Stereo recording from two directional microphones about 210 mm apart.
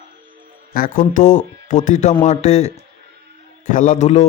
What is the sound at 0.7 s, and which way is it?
Speech, 40° left (ahead or behind).